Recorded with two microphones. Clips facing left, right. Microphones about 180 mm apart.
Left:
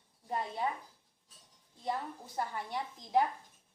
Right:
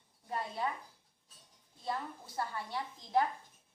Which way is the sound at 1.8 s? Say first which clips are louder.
Left 2 dB; 20° left (ahead or behind).